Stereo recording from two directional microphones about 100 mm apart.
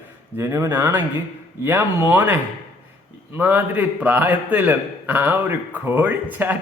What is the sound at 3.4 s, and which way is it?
A man's voice, 20° right (ahead or behind).